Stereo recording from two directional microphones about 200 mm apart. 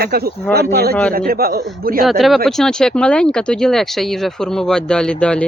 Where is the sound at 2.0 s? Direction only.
Centre (ahead or behind).